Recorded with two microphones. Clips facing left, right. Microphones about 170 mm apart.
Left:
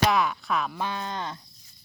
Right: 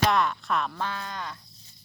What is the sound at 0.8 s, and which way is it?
Speech, 20° left (ahead or behind).